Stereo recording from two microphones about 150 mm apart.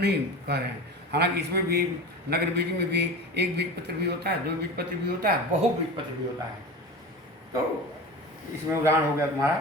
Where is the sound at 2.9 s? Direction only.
90° right.